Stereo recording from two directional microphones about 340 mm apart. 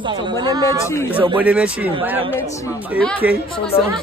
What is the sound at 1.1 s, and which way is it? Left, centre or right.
Speech, centre.